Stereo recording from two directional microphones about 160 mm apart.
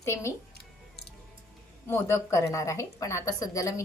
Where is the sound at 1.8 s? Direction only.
15° left (ahead or behind).